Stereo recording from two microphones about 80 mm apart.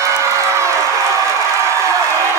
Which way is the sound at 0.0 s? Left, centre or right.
Right.